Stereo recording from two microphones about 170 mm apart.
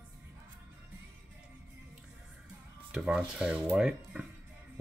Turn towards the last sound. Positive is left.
turn(degrees=-5)  # may be behind; listen again after turning